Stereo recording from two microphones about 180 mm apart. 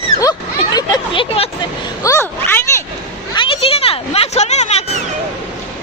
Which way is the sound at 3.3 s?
30° left (ahead or behind).